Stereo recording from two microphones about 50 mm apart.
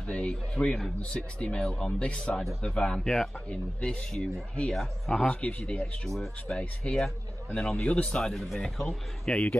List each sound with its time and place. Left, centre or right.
0.1 s speech: left
0.7 s speech: centre
1.4 s speech: left
5.2 s speech: left
6.0 s speech: centre
6.8 s speech: centre
7.5 s speech: left
8.2 s speech: centre
9.3 s speech: left